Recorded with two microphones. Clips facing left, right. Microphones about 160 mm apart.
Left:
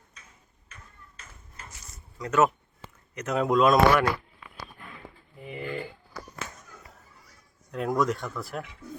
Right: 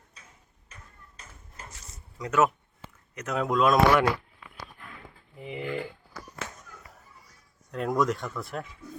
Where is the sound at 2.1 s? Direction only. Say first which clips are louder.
Left 1 dB; 10° right (ahead or behind).